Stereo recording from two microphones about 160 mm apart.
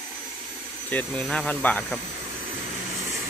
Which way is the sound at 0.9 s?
10° left (ahead or behind).